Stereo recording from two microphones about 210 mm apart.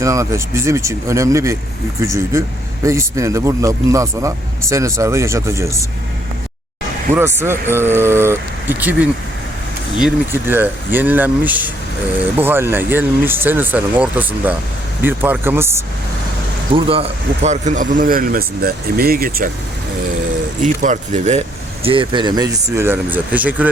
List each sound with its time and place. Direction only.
0.0 s speech: 15° right (ahead or behind)
7.1 s speech: 10° right (ahead or behind)
16.7 s speech: 25° right (ahead or behind); by 19.5 s 45° right (ahead or behind)
20.6 s speech: 35° right (ahead or behind); by 23.6 s 5° right (ahead or behind)